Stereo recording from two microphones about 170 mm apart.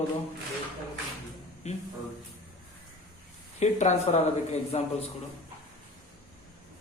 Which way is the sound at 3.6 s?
45° left (ahead or behind).